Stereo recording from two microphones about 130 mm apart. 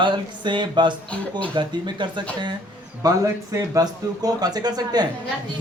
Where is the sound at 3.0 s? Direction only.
25° right (ahead or behind).